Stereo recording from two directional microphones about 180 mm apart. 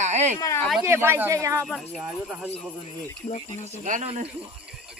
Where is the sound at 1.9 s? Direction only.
5° right (ahead or behind).